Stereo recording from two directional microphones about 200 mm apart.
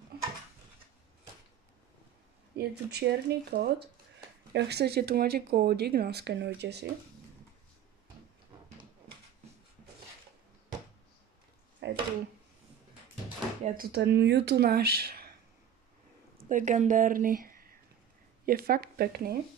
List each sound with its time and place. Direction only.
2.5 s speech: 55° right (ahead or behind)
11.8 s a sound: 60° right (ahead or behind)
13.7 s speech: 50° right (ahead or behind)
16.4 s speech: 40° right (ahead or behind)